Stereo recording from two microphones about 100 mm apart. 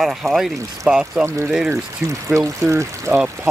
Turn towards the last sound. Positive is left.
turn(degrees=-30)  # may be behind; listen again after turning